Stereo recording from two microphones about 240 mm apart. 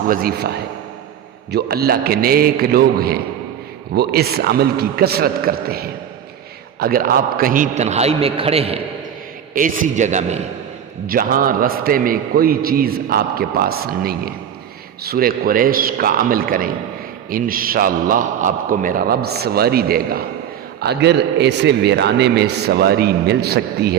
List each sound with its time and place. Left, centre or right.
0.1 s a man's voice: right